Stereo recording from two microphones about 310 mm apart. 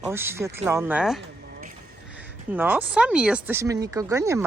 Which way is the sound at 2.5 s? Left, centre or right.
Centre.